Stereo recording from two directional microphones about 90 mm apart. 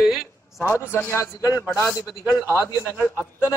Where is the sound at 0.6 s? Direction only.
25° left (ahead or behind).